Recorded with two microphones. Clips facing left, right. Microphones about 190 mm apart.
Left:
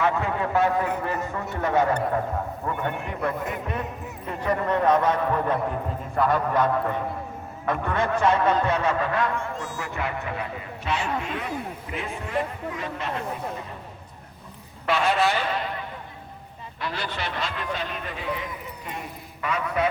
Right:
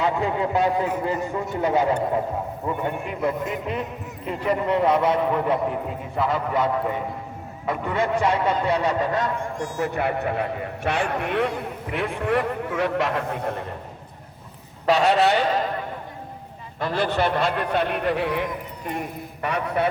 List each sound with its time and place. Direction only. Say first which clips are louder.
0.0 s a man's voice: right 2 dB; 20° right (ahead or behind)
9.8 s a man's voice: right 9 dB; 50° right (ahead or behind)
14.8 s a man's voice: right 4 dB; 40° right (ahead or behind)
16.8 s a man's voice: right 9 dB; 50° right (ahead or behind)